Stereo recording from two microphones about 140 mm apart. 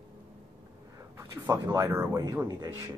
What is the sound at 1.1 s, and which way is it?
Speech, 20° right (ahead or behind).